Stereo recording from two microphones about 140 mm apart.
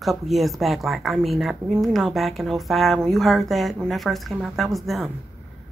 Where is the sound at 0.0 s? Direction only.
Centre (ahead or behind).